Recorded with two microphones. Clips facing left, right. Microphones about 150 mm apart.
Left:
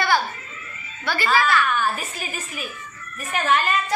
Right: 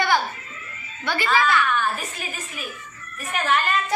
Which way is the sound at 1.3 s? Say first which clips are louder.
Left 1 dB; 5° left (ahead or behind).